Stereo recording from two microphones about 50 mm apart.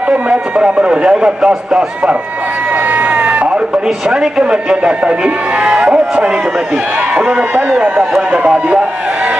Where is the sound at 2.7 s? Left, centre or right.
Right.